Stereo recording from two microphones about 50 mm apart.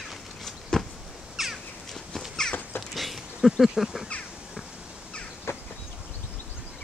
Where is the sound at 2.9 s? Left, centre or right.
Centre.